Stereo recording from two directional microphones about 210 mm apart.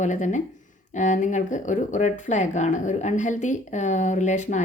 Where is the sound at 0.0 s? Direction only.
35° left (ahead or behind).